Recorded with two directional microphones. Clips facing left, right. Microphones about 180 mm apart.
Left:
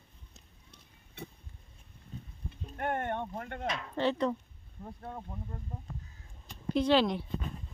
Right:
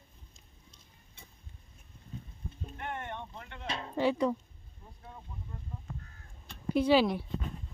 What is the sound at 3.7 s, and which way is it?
Speech, 30° right (ahead or behind).